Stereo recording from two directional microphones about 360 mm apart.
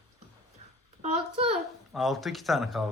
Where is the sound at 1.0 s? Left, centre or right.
Centre.